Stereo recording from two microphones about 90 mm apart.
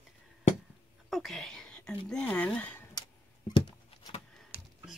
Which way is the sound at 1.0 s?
Centre (ahead or behind).